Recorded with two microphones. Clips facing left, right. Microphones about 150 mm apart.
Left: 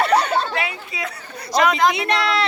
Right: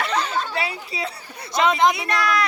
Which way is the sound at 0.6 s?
35° right (ahead or behind).